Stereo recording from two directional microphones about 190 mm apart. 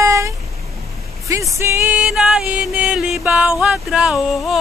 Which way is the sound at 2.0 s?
Centre (ahead or behind).